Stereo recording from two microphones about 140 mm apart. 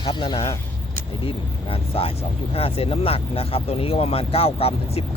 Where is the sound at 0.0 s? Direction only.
35° left (ahead or behind).